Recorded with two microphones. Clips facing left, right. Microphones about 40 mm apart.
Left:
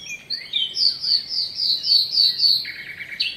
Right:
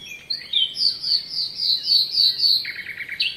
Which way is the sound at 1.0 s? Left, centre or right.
Right.